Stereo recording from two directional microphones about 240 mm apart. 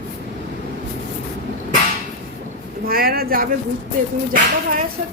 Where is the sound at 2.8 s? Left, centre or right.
Right.